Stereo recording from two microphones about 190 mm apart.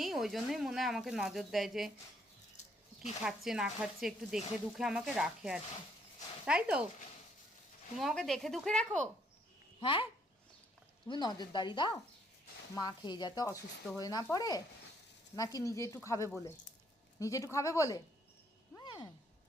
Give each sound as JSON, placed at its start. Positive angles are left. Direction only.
{"t": 0.0, "sound": "speech", "side_deg": 0}
{"t": 3.2, "sound": "speech", "side_deg": -5}
{"t": 7.9, "sound": "speech", "side_deg": 0}
{"t": 9.8, "sound": "speech", "side_deg": 25}
{"t": 11.1, "sound": "speech", "side_deg": 20}
{"t": 18.8, "sound": "a sound", "side_deg": 25}